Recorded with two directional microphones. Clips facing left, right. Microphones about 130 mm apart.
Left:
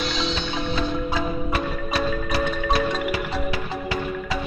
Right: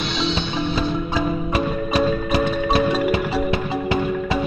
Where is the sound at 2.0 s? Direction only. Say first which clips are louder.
Right 5 dB; 20° right (ahead or behind).